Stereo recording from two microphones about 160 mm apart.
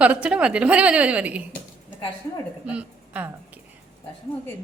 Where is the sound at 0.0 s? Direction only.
10° right (ahead or behind).